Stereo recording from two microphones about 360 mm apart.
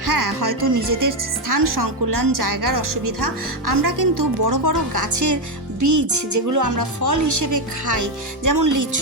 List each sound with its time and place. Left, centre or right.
0.0 s speech: right